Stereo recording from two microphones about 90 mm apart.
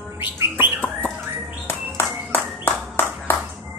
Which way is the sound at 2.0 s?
30° left (ahead or behind).